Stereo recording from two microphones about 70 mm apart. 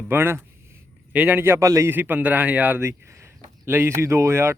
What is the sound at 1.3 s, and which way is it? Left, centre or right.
Speech, right.